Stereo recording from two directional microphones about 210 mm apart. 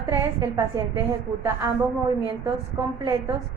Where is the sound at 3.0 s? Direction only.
20° right (ahead or behind).